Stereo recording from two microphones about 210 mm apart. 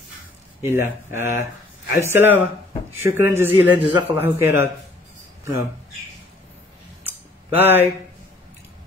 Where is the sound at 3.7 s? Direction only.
20° right (ahead or behind).